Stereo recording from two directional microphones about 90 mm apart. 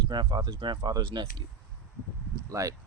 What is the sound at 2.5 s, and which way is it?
Speech, 40° right (ahead or behind).